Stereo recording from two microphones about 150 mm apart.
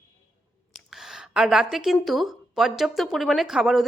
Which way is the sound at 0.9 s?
5° right (ahead or behind).